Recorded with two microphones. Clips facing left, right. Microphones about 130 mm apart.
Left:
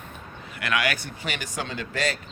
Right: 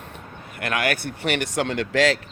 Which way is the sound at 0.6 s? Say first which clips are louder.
Right 2 dB; 50° right (ahead or behind).